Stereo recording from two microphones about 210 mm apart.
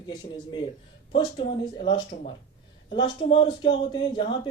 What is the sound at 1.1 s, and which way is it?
Speech, 25° left (ahead or behind).